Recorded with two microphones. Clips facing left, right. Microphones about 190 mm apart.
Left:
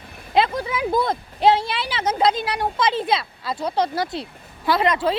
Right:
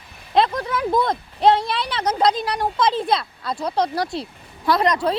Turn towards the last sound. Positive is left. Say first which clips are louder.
# right 1 dB
turn(degrees=0)  # may be behind; listen again after turning